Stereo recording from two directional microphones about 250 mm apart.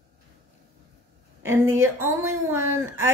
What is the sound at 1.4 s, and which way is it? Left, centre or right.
Speech, centre.